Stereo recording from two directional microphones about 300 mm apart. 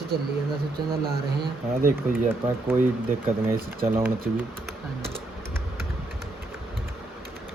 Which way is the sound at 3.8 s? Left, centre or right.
Centre.